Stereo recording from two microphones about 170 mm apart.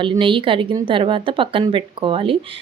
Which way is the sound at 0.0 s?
30° right (ahead or behind).